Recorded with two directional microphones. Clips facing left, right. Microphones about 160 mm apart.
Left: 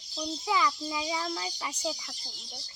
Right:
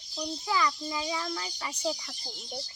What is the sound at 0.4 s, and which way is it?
Speech, 10° left (ahead or behind).